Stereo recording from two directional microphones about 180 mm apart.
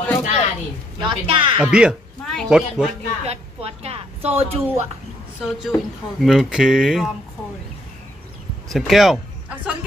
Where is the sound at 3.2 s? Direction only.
35° right (ahead or behind).